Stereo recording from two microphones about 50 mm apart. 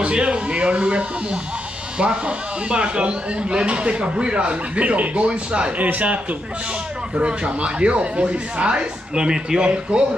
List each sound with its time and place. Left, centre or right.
0.0 s a man's voice: right
7.2 s speech: right